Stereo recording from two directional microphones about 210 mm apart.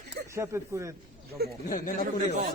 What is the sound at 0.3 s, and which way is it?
Speech, 15° right (ahead or behind).